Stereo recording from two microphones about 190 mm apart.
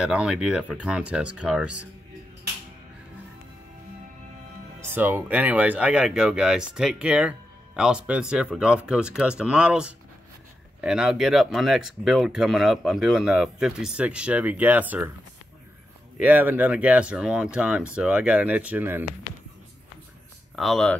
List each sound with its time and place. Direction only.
0.0 s speech: 5° right (ahead or behind)
4.7 s speech: 10° right (ahead or behind)
16.2 s speech: 10° right (ahead or behind)
20.5 s speech: centre (ahead or behind)